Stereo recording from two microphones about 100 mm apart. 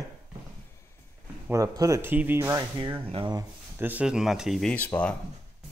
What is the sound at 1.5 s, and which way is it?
Speech, 35° right (ahead or behind).